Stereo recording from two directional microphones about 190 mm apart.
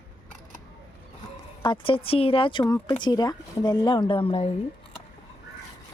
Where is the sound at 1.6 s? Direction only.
25° left (ahead or behind).